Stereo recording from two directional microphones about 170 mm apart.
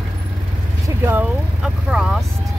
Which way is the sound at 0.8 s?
10° right (ahead or behind).